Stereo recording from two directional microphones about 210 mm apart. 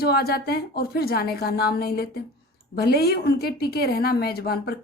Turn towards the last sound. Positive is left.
turn(degrees=45)  # may be behind; listen again after turning